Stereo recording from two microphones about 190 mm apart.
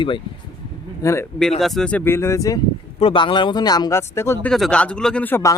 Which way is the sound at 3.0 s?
30° left (ahead or behind).